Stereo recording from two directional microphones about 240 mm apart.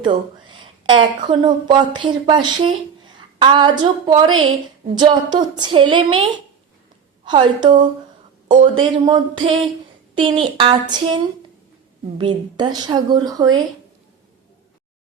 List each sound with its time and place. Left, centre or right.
0.0 s a woman's voice: centre